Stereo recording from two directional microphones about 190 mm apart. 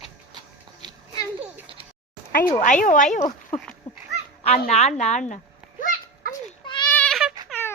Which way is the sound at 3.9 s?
35° left (ahead or behind).